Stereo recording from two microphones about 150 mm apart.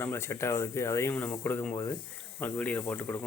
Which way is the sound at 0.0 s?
15° left (ahead or behind).